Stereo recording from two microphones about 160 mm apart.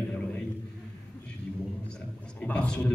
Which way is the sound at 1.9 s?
10° left (ahead or behind).